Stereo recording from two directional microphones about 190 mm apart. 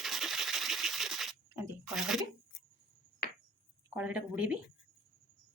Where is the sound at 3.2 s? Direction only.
55° left (ahead or behind).